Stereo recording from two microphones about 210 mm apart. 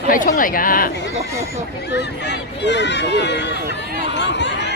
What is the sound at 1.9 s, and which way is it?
Speech, 55° left (ahead or behind).